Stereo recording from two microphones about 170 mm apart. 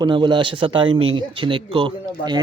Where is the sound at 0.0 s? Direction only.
25° right (ahead or behind).